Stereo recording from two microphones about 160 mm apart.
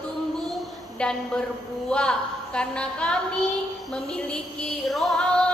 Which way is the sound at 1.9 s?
5° left (ahead or behind).